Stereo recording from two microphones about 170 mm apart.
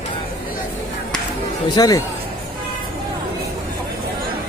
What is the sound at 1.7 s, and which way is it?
Speech, 20° left (ahead or behind).